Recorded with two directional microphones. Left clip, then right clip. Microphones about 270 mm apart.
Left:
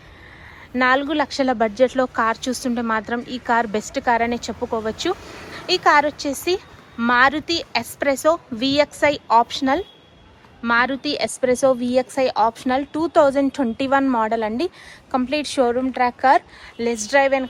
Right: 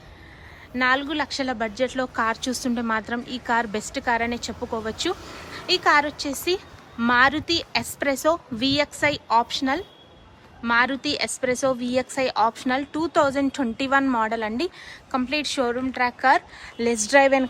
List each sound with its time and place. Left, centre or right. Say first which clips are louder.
0.7 s speech: left 4 dB; centre